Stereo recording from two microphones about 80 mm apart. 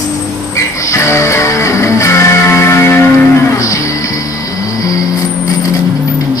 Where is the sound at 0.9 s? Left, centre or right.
Left.